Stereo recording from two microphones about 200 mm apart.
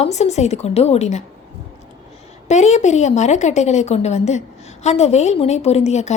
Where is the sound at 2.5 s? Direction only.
35° left (ahead or behind).